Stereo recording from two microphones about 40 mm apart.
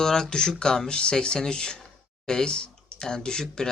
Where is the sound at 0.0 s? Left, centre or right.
Centre.